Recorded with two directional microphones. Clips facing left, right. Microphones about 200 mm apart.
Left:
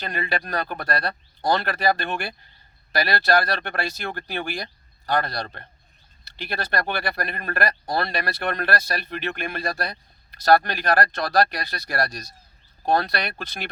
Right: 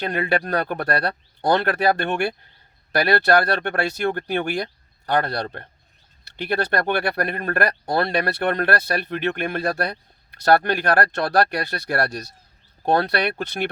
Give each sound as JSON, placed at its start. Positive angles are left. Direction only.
{"t": 0.1, "sound": "speech", "side_deg": -55}